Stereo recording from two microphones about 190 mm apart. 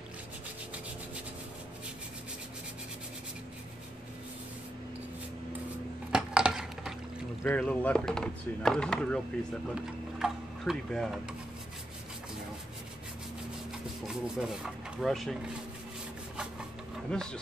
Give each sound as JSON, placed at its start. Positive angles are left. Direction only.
{"t": 6.1, "sound": "a sound", "side_deg": -5}
{"t": 7.4, "sound": "speech", "side_deg": 5}
{"t": 14.0, "sound": "speech", "side_deg": -5}
{"t": 17.1, "sound": "speech", "side_deg": 5}